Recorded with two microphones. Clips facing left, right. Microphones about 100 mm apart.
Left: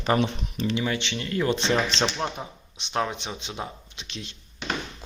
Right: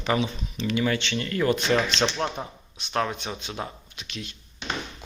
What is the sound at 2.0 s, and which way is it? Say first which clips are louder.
Speech: right 1 dB; 5° left (ahead or behind).